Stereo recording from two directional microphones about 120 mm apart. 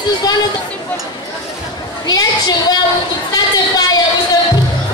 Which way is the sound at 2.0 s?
35° left (ahead or behind).